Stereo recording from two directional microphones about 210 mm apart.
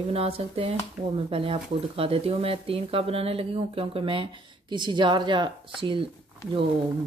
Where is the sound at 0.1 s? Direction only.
30° right (ahead or behind).